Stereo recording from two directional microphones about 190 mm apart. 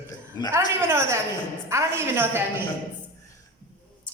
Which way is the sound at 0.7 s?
15° right (ahead or behind).